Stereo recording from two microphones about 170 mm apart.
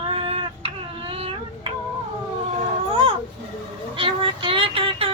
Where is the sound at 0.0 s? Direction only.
35° right (ahead or behind).